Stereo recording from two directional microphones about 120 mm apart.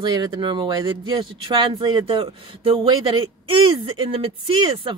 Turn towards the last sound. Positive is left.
turn(degrees=-45)  # may be behind; listen again after turning